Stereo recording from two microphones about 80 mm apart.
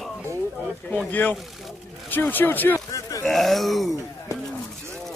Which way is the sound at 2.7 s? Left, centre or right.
Left.